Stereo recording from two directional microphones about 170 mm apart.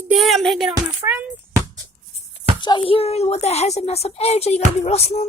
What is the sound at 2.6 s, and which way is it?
A woman's voice, 30° left (ahead or behind).